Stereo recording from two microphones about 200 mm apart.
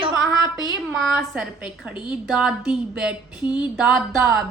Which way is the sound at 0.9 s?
Centre (ahead or behind).